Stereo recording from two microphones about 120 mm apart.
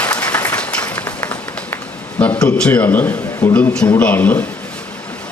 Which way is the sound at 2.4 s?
10° left (ahead or behind).